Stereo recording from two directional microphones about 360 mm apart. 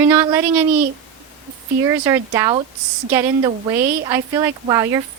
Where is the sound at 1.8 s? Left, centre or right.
Centre.